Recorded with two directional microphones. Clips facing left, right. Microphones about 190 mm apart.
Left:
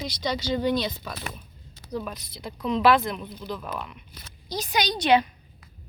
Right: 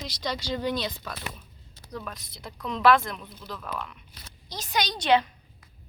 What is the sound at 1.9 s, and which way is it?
Speech, 15° left (ahead or behind).